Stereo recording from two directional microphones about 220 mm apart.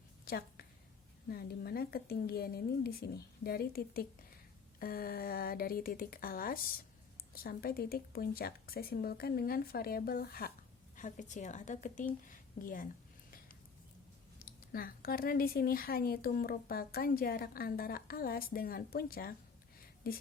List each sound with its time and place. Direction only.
0.3 s a woman's voice: 45° left (ahead or behind)
14.7 s speech: 40° left (ahead or behind)